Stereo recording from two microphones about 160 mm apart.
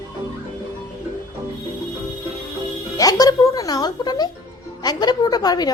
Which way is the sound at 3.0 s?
25° left (ahead or behind).